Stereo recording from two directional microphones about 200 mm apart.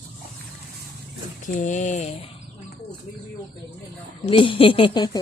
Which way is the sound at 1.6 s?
35° left (ahead or behind).